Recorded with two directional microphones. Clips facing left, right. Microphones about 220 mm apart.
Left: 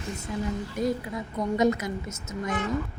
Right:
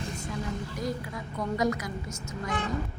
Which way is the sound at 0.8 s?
25° left (ahead or behind).